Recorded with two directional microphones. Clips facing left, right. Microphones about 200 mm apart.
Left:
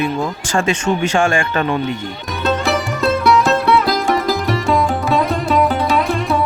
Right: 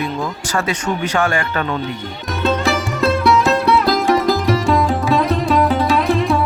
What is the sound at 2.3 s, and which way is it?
Music, centre (ahead or behind).